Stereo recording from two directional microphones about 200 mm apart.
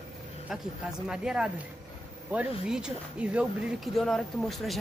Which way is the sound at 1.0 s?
5° right (ahead or behind).